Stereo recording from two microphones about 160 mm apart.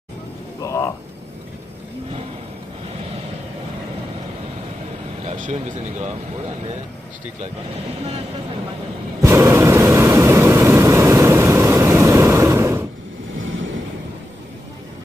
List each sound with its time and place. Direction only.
0.6 s a sound: 20° left (ahead or behind)
5.2 s speech: 45° right (ahead or behind)
9.2 s vehicle: 20° right (ahead or behind)